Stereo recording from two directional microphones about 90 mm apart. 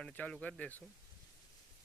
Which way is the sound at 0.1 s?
15° left (ahead or behind).